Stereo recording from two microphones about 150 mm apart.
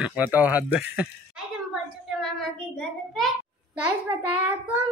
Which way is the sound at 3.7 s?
10° right (ahead or behind).